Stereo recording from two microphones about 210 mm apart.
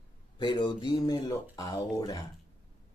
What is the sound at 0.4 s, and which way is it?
Speech, 20° left (ahead or behind).